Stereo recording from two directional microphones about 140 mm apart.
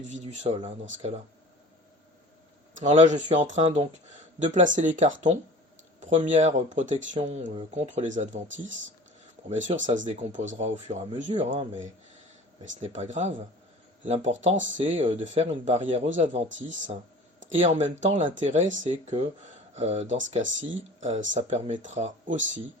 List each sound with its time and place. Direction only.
0.1 s speech: 55° right (ahead or behind)
2.8 s speech: 55° right (ahead or behind)
17.7 s speech: 60° right (ahead or behind)